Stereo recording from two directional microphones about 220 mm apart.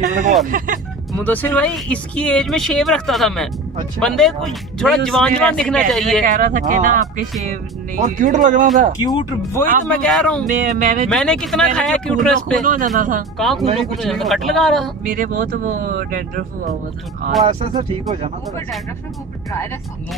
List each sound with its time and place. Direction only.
0.1 s speech: 35° right (ahead or behind)
1.2 s speech: 5° left (ahead or behind)
6.2 s speech: 35° right (ahead or behind)
9.8 s speech: 5° left (ahead or behind)
10.5 s speech: 35° right (ahead or behind)
11.1 s speech: 5° left (ahead or behind)
12.6 s speech: 35° right (ahead or behind)
13.4 s speech: centre (ahead or behind)
15.0 s speech: 40° right (ahead or behind)
17.5 s speech: 30° right (ahead or behind)